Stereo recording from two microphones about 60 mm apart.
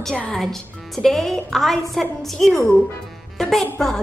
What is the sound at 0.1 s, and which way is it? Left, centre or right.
Speech, centre.